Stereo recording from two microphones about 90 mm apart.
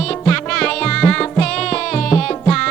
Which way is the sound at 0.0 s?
10° left (ahead or behind).